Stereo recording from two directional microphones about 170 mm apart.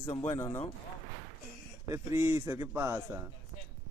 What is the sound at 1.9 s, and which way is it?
A man's voice, 15° right (ahead or behind).